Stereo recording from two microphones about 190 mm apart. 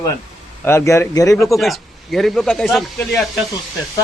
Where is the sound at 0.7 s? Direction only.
15° left (ahead or behind).